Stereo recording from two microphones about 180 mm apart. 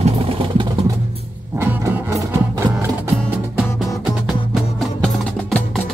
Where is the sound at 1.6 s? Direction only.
15° right (ahead or behind).